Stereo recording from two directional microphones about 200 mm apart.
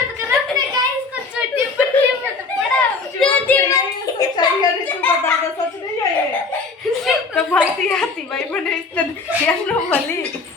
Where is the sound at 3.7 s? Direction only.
20° left (ahead or behind).